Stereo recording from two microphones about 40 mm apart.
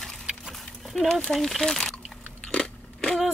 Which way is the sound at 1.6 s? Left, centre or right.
Centre.